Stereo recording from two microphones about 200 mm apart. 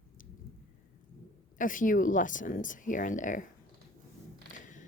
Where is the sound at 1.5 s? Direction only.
40° left (ahead or behind).